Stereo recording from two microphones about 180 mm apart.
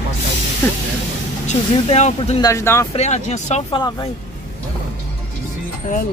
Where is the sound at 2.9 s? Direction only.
40° left (ahead or behind).